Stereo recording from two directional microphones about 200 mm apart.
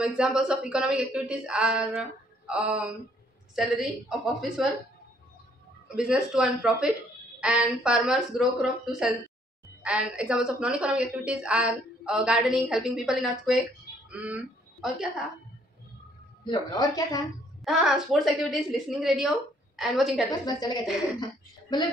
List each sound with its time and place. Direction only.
0.0 s a woman's voice: 5° right (ahead or behind)
5.9 s a woman's voice: 5° right (ahead or behind)
16.4 s speech: 20° left (ahead or behind)
17.6 s a woman's voice: centre (ahead or behind)
20.4 s a woman's voice: 20° left (ahead or behind)